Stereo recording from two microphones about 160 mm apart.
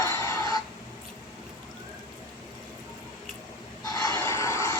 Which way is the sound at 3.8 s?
25° left (ahead or behind).